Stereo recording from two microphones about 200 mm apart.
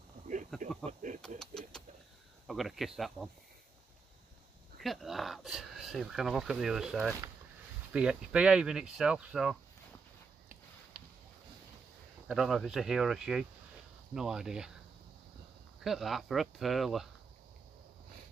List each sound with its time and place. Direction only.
0.5 s a sound: centre (ahead or behind)
2.4 s speech: centre (ahead or behind)
4.7 s speech: centre (ahead or behind)
12.3 s speech: centre (ahead or behind)
15.8 s speech: centre (ahead or behind)